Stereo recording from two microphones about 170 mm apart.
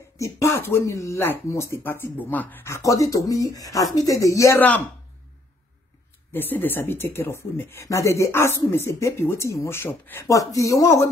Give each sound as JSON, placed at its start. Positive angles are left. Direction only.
{"t": 0.2, "sound": "speech", "side_deg": 15}
{"t": 6.3, "sound": "speech", "side_deg": 10}